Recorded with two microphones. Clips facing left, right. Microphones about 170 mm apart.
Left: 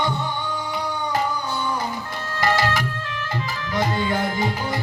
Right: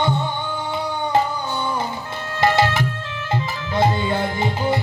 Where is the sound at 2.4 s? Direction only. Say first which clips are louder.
Right 4 dB; 25° right (ahead or behind).